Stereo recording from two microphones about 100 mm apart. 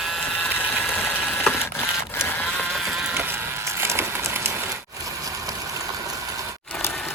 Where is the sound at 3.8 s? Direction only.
25° right (ahead or behind).